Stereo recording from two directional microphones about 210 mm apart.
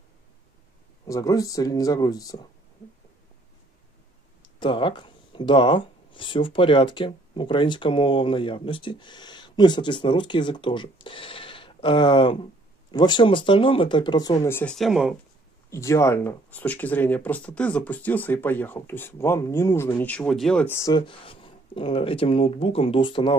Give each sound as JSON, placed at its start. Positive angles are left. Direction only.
{"t": 1.0, "sound": "speech", "side_deg": 15}
{"t": 4.4, "sound": "speech", "side_deg": 25}
{"t": 15.7, "sound": "speech", "side_deg": 15}